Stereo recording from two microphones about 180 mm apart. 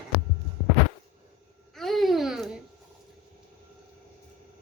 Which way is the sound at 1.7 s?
Centre (ahead or behind).